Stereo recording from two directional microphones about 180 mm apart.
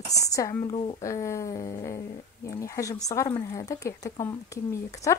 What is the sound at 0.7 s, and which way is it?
Speech, 30° left (ahead or behind).